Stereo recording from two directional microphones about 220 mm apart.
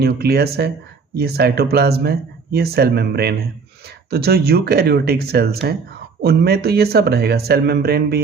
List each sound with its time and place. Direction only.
0.0 s speech: 45° right (ahead or behind)